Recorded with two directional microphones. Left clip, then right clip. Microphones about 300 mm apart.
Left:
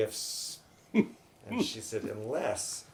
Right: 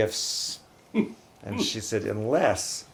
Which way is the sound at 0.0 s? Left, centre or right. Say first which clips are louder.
Right 7 dB; right.